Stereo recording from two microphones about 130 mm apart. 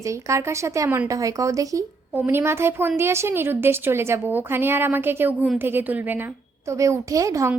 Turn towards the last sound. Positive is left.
turn(degrees=-25)  # may be behind; listen again after turning